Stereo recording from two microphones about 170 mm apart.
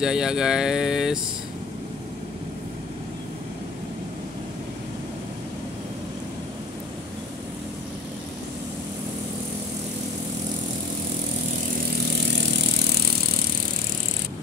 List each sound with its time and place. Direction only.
0.0 s speech: 5° right (ahead or behind)